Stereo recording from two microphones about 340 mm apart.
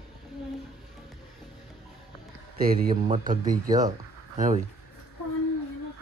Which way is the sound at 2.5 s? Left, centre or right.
Right.